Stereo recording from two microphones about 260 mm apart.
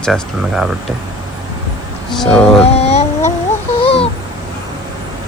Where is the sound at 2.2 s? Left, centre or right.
Centre.